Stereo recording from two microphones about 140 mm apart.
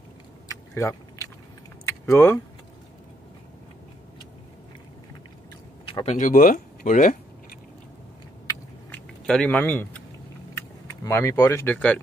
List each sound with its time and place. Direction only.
0.5 s keys jangling: 25° left (ahead or behind)
1.9 s speech: 20° left (ahead or behind)
6.0 s speech: 65° left (ahead or behind)
9.2 s speech: 5° left (ahead or behind)
11.1 s speech: 20° left (ahead or behind)